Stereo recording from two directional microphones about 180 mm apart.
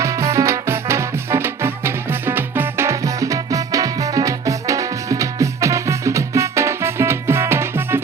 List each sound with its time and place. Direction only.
0.0 s music: 15° right (ahead or behind)